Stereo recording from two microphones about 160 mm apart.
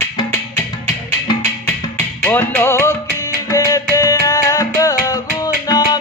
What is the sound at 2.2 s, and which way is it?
Music, 15° left (ahead or behind).